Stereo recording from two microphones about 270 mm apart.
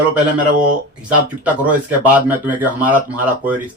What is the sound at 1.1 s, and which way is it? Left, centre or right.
Speech, centre.